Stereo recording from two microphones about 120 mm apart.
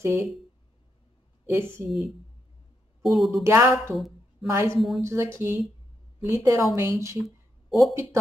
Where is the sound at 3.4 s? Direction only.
20° right (ahead or behind).